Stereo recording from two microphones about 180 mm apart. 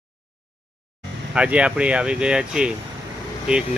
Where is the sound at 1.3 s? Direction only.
5° right (ahead or behind).